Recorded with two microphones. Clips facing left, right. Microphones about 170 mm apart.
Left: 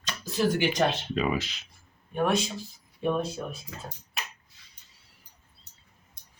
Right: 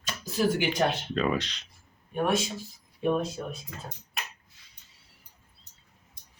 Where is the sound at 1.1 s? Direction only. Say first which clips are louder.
Even; 5° left (ahead or behind).